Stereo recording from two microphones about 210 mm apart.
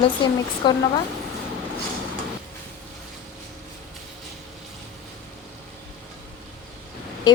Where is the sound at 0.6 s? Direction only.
20° left (ahead or behind).